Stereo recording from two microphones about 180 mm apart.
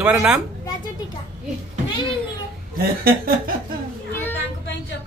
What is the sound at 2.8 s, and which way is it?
Speech, 60° right (ahead or behind).